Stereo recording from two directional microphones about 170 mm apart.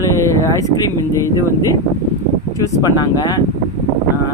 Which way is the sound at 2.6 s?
20° left (ahead or behind).